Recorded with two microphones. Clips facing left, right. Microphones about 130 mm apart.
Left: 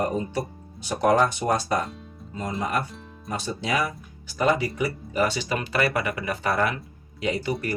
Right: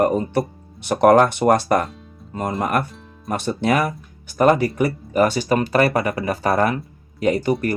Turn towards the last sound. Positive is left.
turn(degrees=-45)  # may be behind; listen again after turning